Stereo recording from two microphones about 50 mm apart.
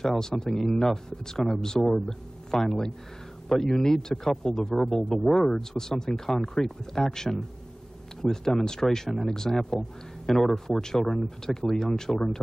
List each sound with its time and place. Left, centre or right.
0.0 s speech: centre